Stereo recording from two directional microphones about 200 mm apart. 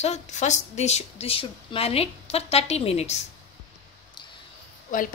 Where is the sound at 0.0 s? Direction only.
35° left (ahead or behind).